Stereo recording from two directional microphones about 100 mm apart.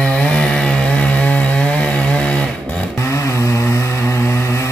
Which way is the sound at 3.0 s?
30° left (ahead or behind).